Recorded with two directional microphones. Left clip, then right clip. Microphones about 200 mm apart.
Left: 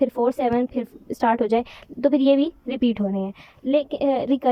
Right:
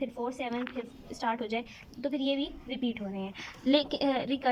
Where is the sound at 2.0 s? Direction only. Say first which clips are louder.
Left 14 dB; 55° left (ahead or behind).